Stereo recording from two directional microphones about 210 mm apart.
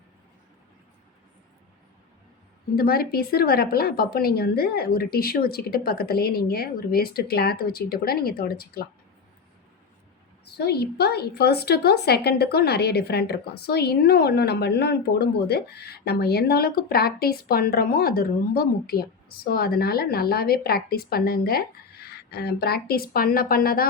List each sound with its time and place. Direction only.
2.7 s a woman's voice: 45° left (ahead or behind)
10.4 s a woman's voice: 50° left (ahead or behind)